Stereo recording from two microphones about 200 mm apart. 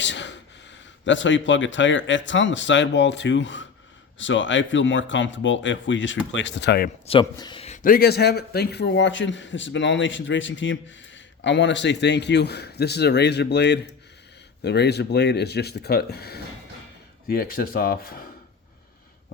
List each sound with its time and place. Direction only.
0.0 s speech: 65° left (ahead or behind)
7.1 s a man's voice: 20° left (ahead or behind); by 18.3 s 45° left (ahead or behind)